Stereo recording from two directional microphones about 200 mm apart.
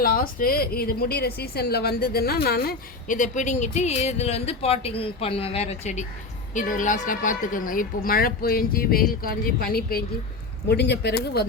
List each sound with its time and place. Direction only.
0.0 s a woman's voice: 45° left (ahead or behind)